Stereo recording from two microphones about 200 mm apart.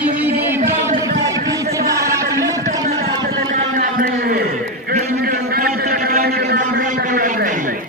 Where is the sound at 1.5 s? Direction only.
15° right (ahead or behind).